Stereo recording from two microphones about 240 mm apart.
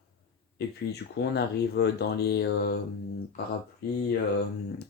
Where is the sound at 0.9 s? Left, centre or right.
Left.